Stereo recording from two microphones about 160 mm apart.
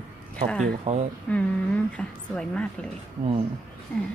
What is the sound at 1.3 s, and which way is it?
A woman's voice, 10° left (ahead or behind).